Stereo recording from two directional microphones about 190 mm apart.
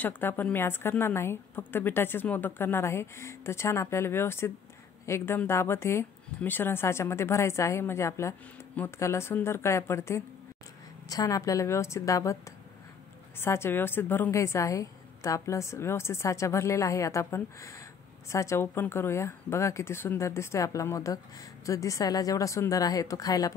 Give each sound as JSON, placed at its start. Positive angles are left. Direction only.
{"t": 0.0, "sound": "speech", "side_deg": 10}